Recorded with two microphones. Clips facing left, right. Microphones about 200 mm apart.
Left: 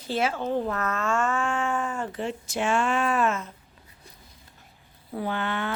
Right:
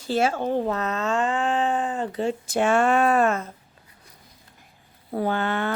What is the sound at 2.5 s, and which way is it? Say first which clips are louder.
Speech: right 5 dB; 55° right (ahead or behind).